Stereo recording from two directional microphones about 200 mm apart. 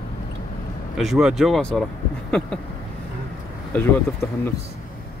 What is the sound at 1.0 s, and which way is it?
Speech, centre (ahead or behind).